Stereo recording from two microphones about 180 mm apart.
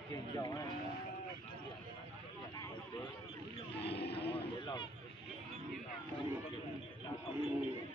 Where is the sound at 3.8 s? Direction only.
65° left (ahead or behind).